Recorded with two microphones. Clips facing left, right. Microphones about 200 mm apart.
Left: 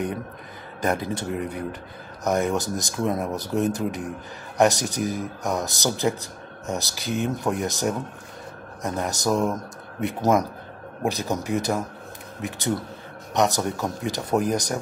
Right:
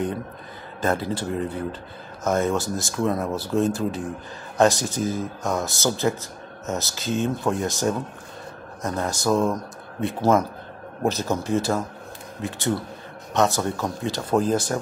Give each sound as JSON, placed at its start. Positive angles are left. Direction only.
{"t": 0.7, "sound": "a man's voice", "side_deg": 20}